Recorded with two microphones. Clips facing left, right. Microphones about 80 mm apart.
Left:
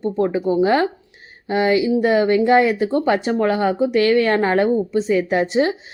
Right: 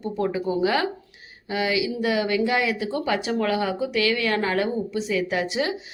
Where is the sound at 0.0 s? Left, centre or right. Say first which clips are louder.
Left 6 dB; left.